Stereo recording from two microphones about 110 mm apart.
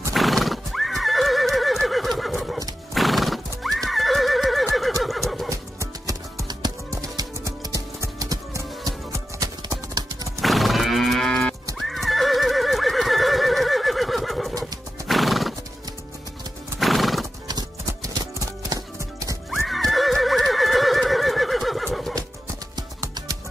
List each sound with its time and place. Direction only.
0.1 s horse: centre (ahead or behind)
5.5 s music: 30° right (ahead or behind)
10.4 s cattle: centre (ahead or behind)
11.8 s neigh: centre (ahead or behind)
14.6 s horse: centre (ahead or behind)
16.8 s horse: centre (ahead or behind)
17.5 s music: 40° right (ahead or behind)
19.6 s neigh: centre (ahead or behind)
22.8 s music: 35° right (ahead or behind)